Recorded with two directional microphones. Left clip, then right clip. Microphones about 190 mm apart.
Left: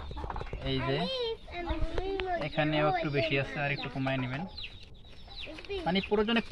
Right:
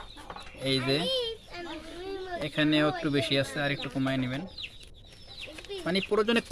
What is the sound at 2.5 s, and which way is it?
Speech, 60° right (ahead or behind).